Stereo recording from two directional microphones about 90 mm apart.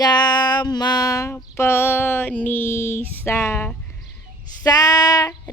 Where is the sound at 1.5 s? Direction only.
25° left (ahead or behind).